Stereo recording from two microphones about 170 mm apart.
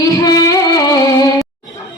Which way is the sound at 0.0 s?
20° left (ahead or behind).